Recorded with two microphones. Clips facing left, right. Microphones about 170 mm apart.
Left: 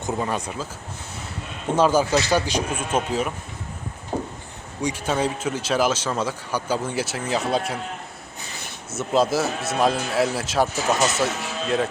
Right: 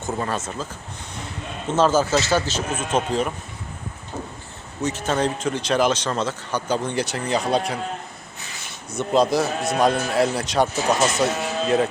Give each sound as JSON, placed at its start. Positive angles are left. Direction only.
{"t": 0.1, "sound": "speech", "side_deg": 15}
{"t": 1.7, "sound": "speech", "side_deg": 10}
{"t": 4.1, "sound": "a sound", "side_deg": 45}
{"t": 4.8, "sound": "speech", "side_deg": 10}
{"t": 8.9, "sound": "a man's voice", "side_deg": 5}